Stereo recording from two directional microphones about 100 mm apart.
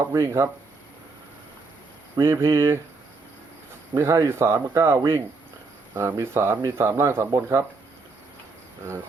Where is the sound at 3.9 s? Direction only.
30° right (ahead or behind).